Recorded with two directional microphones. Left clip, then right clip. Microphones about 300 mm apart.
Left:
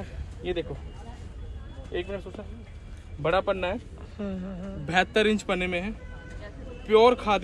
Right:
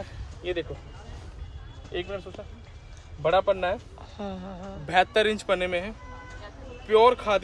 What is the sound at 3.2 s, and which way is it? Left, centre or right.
Speech, centre.